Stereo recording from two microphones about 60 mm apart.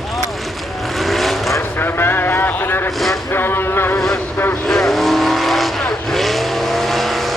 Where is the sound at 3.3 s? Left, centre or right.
Left.